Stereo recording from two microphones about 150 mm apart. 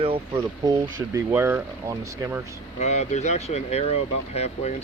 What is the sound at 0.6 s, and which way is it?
Speech, 20° right (ahead or behind).